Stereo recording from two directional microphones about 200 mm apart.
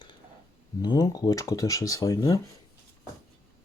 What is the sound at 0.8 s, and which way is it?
Speech, 20° left (ahead or behind).